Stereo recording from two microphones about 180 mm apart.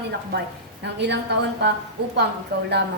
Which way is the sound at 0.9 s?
70° right (ahead or behind).